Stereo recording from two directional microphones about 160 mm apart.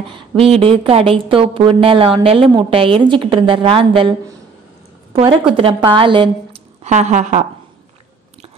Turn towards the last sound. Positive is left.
turn(degrees=-50)  # may be behind; listen again after turning